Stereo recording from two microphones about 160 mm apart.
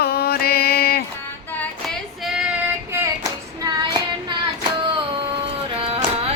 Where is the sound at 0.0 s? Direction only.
75° left (ahead or behind).